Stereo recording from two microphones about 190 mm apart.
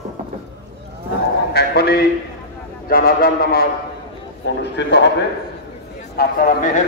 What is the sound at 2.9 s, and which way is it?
Speech, 50° left (ahead or behind).